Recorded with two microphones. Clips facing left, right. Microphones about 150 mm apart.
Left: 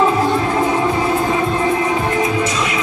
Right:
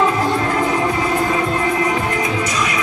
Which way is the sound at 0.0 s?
25° left (ahead or behind).